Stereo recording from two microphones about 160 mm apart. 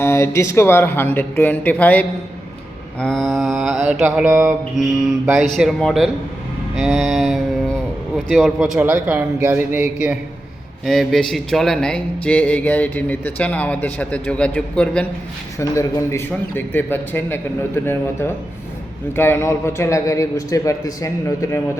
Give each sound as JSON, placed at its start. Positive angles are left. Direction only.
{"t": 0.0, "sound": "speech", "side_deg": 15}
{"t": 3.0, "sound": "music", "side_deg": 5}
{"t": 4.0, "sound": "mantra", "side_deg": -5}
{"t": 4.8, "sound": "music", "side_deg": -5}
{"t": 6.7, "sound": "speech", "side_deg": 0}
{"t": 10.8, "sound": "speech", "side_deg": 0}
{"t": 15.5, "sound": "speech", "side_deg": 20}